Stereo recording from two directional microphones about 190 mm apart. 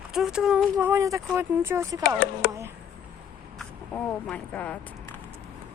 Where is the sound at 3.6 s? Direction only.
5° left (ahead or behind).